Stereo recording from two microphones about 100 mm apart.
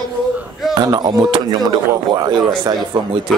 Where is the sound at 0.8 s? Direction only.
40° right (ahead or behind).